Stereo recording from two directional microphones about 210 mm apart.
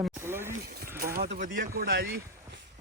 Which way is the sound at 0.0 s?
10° right (ahead or behind).